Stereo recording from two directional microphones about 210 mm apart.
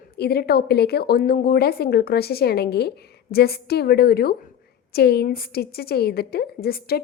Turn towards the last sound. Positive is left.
turn(degrees=45)  # may be behind; listen again after turning